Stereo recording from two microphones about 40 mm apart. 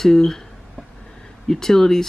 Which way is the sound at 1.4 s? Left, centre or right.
Centre.